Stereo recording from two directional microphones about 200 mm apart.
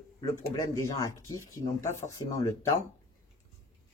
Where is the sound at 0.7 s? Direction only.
15° left (ahead or behind).